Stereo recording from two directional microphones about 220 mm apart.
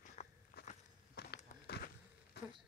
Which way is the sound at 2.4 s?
50° left (ahead or behind).